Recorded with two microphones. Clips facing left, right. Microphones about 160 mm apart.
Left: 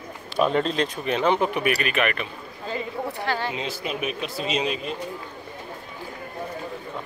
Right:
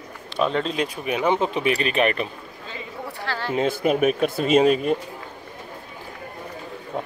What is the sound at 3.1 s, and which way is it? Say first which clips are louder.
Speech: even; 20° left (ahead or behind).